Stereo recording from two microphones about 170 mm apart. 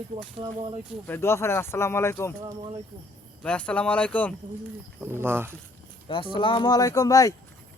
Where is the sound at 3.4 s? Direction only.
5° left (ahead or behind).